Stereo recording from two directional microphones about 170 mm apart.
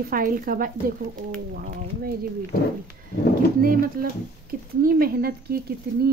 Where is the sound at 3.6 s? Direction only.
60° right (ahead or behind).